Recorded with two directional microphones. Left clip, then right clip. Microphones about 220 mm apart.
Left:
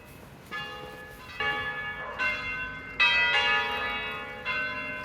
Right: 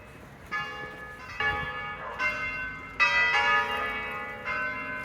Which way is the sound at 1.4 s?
20° left (ahead or behind).